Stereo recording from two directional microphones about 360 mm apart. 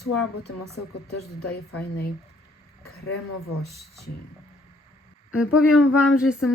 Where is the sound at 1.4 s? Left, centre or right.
Left.